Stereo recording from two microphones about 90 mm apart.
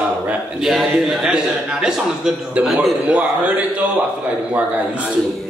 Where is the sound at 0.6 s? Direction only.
5° right (ahead or behind).